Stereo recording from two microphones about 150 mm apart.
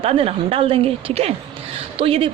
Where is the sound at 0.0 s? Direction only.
40° right (ahead or behind).